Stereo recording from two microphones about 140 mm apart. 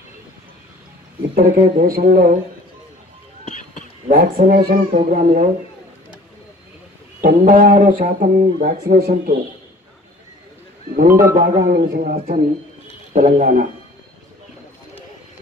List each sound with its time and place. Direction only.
1.3 s speech: 65° right (ahead or behind)
2.0 s speech: 90° right
4.1 s speech: 75° right (ahead or behind)
7.2 s speech: 75° right (ahead or behind)
8.9 s speech: 90° right
11.0 s a man's voice: 75° right (ahead or behind)